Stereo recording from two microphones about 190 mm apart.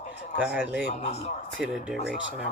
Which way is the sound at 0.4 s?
5° right (ahead or behind).